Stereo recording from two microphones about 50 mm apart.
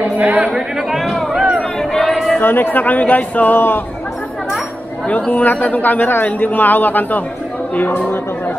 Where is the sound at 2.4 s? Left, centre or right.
Left.